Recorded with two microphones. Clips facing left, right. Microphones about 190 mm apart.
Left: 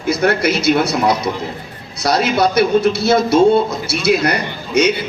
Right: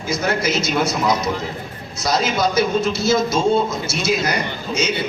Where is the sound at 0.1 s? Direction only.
65° left (ahead or behind).